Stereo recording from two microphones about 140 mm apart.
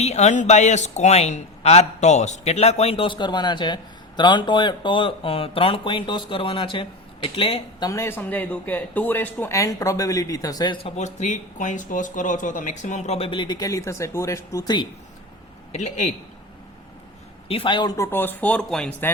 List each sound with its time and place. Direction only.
0.0 s a man's voice: 55° left (ahead or behind)
7.8 s speech: 20° left (ahead or behind)
10.8 s speech: 55° left (ahead or behind); by 14.8 s 30° left (ahead or behind)
15.7 s speech: 55° left (ahead or behind)
17.5 s speech: 35° left (ahead or behind)
17.9 s speech: 20° left (ahead or behind)